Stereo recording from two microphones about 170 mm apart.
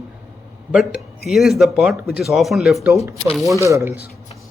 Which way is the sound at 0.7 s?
5° right (ahead or behind).